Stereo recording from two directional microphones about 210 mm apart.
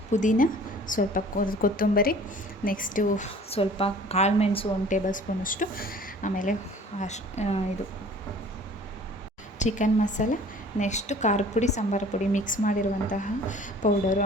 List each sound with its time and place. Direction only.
0.1 s a woman's voice: 35° left (ahead or behind)
5.0 s a woman's voice: 40° left (ahead or behind)
9.6 s a woman's voice: 35° left (ahead or behind)